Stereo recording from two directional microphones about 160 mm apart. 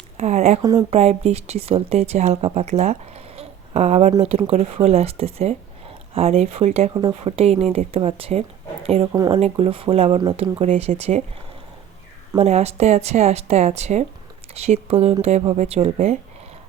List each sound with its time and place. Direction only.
0.2 s speech: 45° right (ahead or behind)
0.6 s speech: 20° right (ahead or behind)
0.9 s speech: 40° right (ahead or behind)
9.1 s speech: 25° right (ahead or behind); by 10.9 s 40° right (ahead or behind)
12.4 s speech: 40° right (ahead or behind)